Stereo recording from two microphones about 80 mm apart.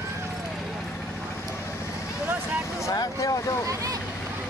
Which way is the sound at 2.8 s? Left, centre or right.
Left.